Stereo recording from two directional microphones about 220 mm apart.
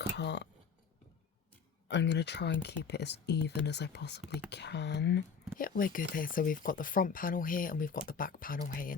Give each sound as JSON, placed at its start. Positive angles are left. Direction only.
{"t": 0.2, "sound": "speech", "side_deg": 50}
{"t": 1.9, "sound": "speech", "side_deg": 50}
{"t": 5.5, "sound": "speech", "side_deg": 40}